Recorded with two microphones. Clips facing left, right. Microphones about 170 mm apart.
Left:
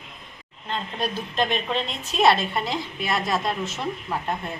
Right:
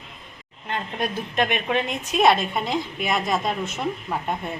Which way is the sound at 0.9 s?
20° right (ahead or behind).